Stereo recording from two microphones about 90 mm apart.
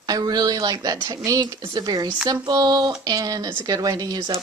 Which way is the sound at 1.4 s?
55° right (ahead or behind).